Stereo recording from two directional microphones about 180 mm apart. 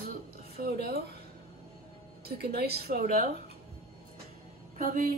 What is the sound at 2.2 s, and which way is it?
A woman's voice, 60° right (ahead or behind).